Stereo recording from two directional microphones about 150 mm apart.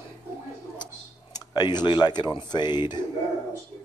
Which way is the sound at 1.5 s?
30° left (ahead or behind).